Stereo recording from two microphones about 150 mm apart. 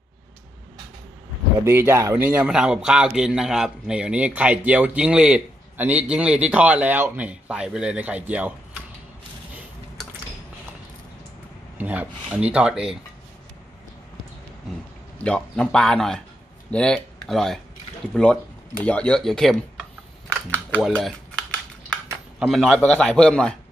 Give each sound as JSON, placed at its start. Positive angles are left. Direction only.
{"t": 1.6, "sound": "a man's voice", "side_deg": -15}
{"t": 11.8, "sound": "a man's voice", "side_deg": -10}
{"t": 15.1, "sound": "a man's voice", "side_deg": 5}
{"t": 20.2, "sound": "typing", "side_deg": -15}
{"t": 20.8, "sound": "typing", "side_deg": 5}
{"t": 22.5, "sound": "a man's voice", "side_deg": 5}